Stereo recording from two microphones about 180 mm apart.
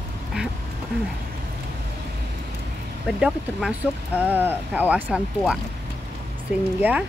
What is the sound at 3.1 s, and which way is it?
Speech, 5° right (ahead or behind).